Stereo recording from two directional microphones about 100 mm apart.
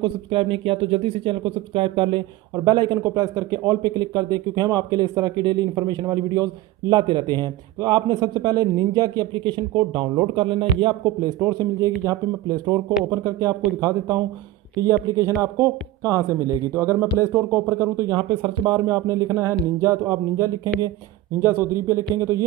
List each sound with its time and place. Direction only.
0.0 s speech: 60° right (ahead or behind)
2.5 s speech: 45° right (ahead or behind)
11.4 s speech: 35° right (ahead or behind)
18.1 s speech: 55° right (ahead or behind); by 22.4 s 30° right (ahead or behind)